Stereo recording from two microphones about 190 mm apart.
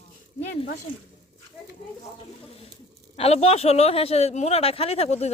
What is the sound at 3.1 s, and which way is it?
Speech, 30° left (ahead or behind).